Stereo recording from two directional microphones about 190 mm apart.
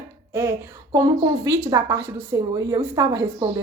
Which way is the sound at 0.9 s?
20° right (ahead or behind).